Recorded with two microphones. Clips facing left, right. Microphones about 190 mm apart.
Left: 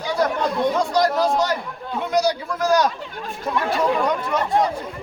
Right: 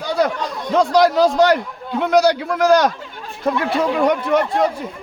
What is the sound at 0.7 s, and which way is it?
A man's voice, 85° right.